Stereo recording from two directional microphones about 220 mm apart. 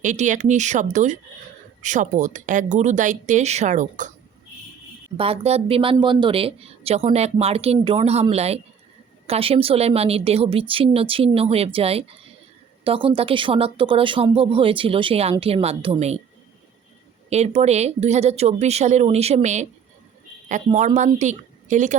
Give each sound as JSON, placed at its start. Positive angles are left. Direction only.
{"t": 0.0, "sound": "speech", "side_deg": -35}
{"t": 5.1, "sound": "speech", "side_deg": -25}
{"t": 17.2, "sound": "speech", "side_deg": -30}
{"t": 20.7, "sound": "speech", "side_deg": -35}